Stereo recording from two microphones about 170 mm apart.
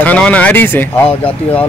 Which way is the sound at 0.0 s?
10° left (ahead or behind).